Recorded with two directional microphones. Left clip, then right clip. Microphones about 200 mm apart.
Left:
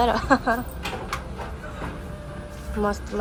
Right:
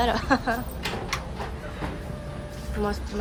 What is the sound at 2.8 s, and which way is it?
Speech, 5° right (ahead or behind).